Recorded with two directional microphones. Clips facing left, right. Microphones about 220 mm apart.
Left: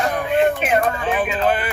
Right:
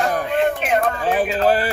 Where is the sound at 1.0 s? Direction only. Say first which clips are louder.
Right 2 dB; 40° right (ahead or behind).